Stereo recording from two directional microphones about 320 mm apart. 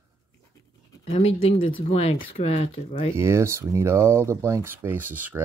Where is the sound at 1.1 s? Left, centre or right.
Centre.